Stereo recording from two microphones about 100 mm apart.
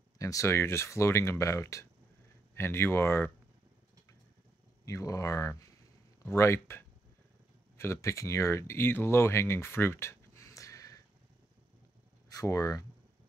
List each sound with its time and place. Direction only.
0.2 s speech: 35° left (ahead or behind)
4.8 s speech: 35° left (ahead or behind)
12.3 s speech: 35° left (ahead or behind)